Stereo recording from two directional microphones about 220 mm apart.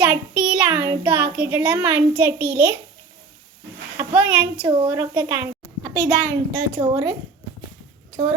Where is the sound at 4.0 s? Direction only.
5° right (ahead or behind).